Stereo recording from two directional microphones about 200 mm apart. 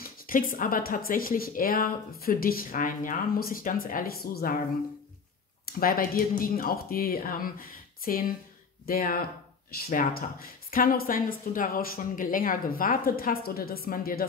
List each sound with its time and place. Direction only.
0.0 s speech: 45° left (ahead or behind)
5.8 s speech: 45° left (ahead or behind)